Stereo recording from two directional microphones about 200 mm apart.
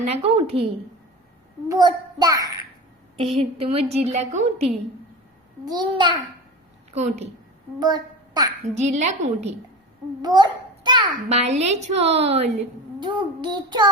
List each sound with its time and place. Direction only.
0.0 s child singing: 30° right (ahead or behind)
1.6 s a child's voice: 20° right (ahead or behind)
3.2 s a woman's voice: 30° right (ahead or behind)
5.6 s child singing: 20° right (ahead or behind)
6.9 s a woman's voice: 35° right (ahead or behind)
7.8 s a woman's voice: 20° right (ahead or behind)
8.7 s a woman's voice: 35° right (ahead or behind)
10.2 s a child's voice: 20° right (ahead or behind)
13.0 s child singing: 20° right (ahead or behind)